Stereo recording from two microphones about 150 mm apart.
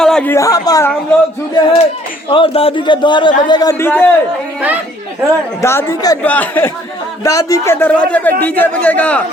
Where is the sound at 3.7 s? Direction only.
15° left (ahead or behind).